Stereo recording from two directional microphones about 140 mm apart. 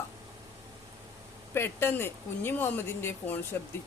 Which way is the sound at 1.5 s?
15° left (ahead or behind).